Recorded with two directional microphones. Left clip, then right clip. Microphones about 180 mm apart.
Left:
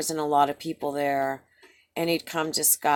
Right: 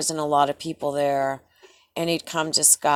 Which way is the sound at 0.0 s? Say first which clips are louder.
Right 2 dB; 30° right (ahead or behind).